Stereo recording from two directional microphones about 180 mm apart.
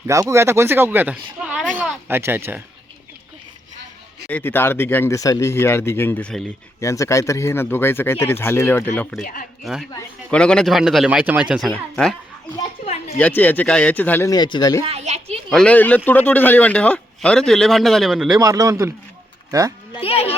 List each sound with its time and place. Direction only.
0.1 s speech: 15° right (ahead or behind)
4.3 s a man's voice: 10° left (ahead or behind)
9.2 s speech: 50° left (ahead or behind)
10.3 s a man's voice: 5° left (ahead or behind)
12.8 s a sound: 35° left (ahead or behind)
13.1 s speech: 10° left (ahead or behind)
14.8 s a sound: 35° right (ahead or behind)
15.4 s a man's voice: 5° left (ahead or behind)
18.3 s speech: 15° right (ahead or behind)
20.0 s speech: 35° left (ahead or behind)